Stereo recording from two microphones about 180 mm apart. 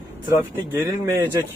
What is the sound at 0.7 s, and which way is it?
Speech, 15° right (ahead or behind).